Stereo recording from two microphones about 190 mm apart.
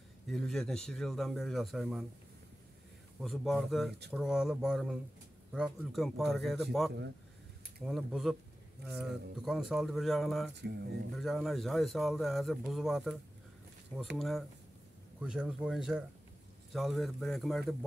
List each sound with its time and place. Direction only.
0.3 s a man's voice: centre (ahead or behind)
3.2 s a man's voice: centre (ahead or behind)
10.6 s speech: 60° right (ahead or behind)
11.1 s a man's voice: centre (ahead or behind)